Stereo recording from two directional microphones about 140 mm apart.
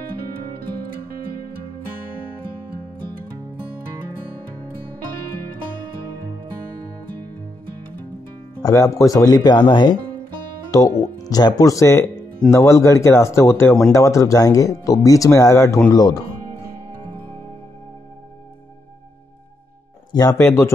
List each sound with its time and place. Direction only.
8.6 s speech: 25° left (ahead or behind)
11.2 s speech: 30° left (ahead or behind)
20.1 s speech: 30° left (ahead or behind)